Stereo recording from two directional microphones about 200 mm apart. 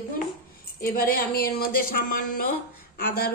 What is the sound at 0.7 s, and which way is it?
Speech, 50° left (ahead or behind).